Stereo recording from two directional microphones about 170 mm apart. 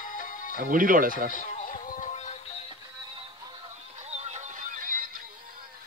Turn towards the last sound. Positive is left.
turn(degrees=-55)  # may be behind; listen again after turning